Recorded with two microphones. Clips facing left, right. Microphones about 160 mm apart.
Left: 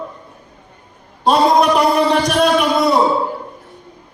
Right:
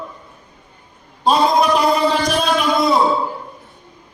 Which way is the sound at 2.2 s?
70° left (ahead or behind).